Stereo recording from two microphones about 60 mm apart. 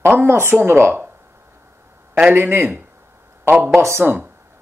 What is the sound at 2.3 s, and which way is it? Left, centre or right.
Speech, right.